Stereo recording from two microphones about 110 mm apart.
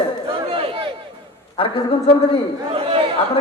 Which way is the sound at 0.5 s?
55° right (ahead or behind).